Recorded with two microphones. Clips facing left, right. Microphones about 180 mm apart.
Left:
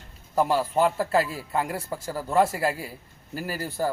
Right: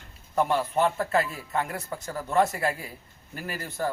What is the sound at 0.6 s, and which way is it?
A man's voice, 30° left (ahead or behind).